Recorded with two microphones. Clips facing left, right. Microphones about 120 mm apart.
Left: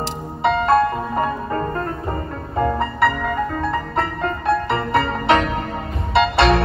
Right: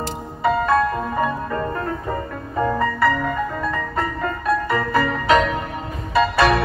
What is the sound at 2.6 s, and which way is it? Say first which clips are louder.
Music: even; 30° left (ahead or behind).